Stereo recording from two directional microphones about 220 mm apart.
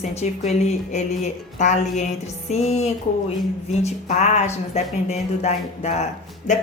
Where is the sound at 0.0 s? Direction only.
30° left (ahead or behind).